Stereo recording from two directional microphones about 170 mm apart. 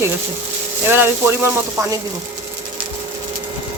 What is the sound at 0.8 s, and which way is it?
Speech, 15° right (ahead or behind).